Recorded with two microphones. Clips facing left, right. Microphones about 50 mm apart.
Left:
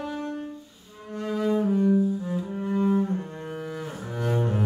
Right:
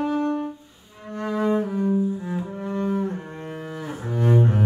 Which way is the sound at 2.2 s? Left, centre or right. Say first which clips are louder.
Even; right.